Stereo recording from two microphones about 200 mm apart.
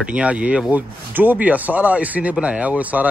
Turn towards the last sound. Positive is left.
turn(degrees=-5)  # may be behind; listen again after turning